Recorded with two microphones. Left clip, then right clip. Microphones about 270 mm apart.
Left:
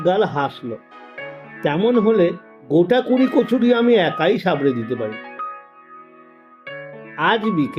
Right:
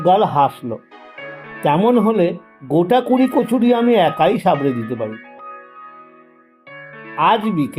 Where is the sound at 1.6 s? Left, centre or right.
Centre.